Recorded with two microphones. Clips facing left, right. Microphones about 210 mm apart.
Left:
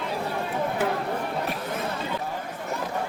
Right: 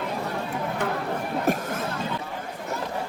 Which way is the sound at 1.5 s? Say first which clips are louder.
Right 8 dB; 45° right (ahead or behind).